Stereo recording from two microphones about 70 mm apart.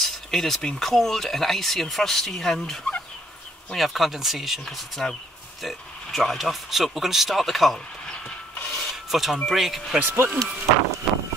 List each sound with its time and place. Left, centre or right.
0.0 s speech: centre
8.6 s filing: centre
9.5 s speech: centre
10.0 s speech: right
11.1 s vehicle: centre